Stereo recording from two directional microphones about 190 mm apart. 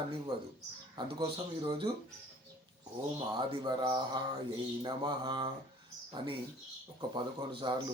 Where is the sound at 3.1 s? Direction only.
25° right (ahead or behind).